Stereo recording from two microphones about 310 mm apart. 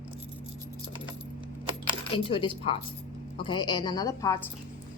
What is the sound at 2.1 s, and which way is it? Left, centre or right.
A woman's voice, centre.